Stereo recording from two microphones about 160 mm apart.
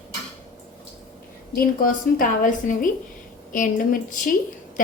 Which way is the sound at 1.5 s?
65° left (ahead or behind).